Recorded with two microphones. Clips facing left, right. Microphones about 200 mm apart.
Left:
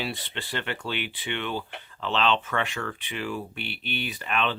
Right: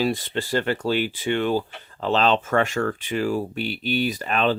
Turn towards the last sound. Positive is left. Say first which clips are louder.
# right 6 dB
turn(degrees=-40)  # may be behind; listen again after turning